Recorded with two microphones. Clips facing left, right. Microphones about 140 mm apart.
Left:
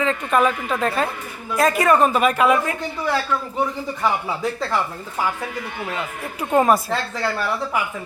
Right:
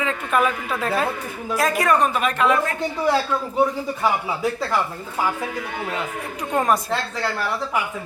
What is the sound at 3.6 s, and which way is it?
Speech, 5° right (ahead or behind).